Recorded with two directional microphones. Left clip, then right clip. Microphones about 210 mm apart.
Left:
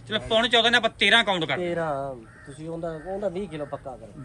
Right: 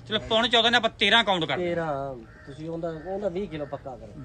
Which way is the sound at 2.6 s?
20° right (ahead or behind).